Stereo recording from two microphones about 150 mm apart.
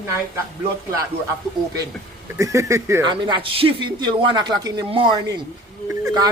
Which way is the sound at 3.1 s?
30° right (ahead or behind).